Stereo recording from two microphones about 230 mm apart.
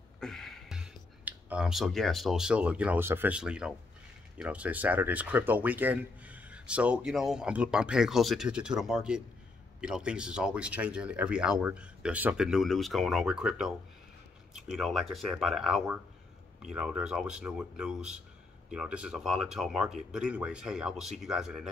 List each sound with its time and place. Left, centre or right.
0.2 s speech: centre